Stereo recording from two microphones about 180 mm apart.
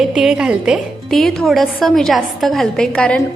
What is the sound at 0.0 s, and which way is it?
A woman's voice, 5° right (ahead or behind).